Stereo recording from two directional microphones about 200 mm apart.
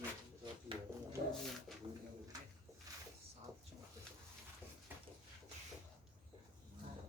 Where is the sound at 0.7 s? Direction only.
25° right (ahead or behind).